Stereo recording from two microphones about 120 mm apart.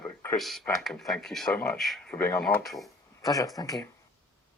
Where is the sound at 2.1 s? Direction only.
15° left (ahead or behind).